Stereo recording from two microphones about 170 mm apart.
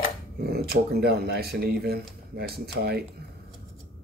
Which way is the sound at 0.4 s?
65° right (ahead or behind).